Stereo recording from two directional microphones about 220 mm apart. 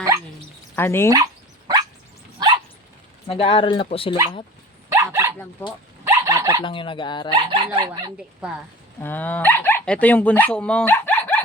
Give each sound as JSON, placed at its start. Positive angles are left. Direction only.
{"t": 0.8, "sound": "speech", "side_deg": 10}
{"t": 1.1, "sound": "dog", "side_deg": -15}
{"t": 3.2, "sound": "speech", "side_deg": 25}
{"t": 4.9, "sound": "dog", "side_deg": -10}
{"t": 6.6, "sound": "speech", "side_deg": 20}
{"t": 7.3, "sound": "speech", "side_deg": -20}
{"t": 9.0, "sound": "speech", "side_deg": 10}